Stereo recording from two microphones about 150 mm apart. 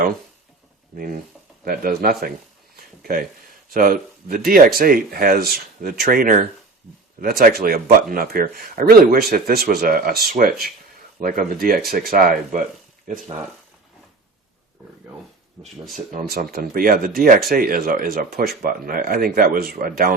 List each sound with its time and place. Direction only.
0.9 s speech: 75° right (ahead or behind)
2.7 s a sound: 75° right (ahead or behind)
3.7 s speech: 70° right (ahead or behind)
15.6 s speech: centre (ahead or behind)
16.1 s speech: 80° right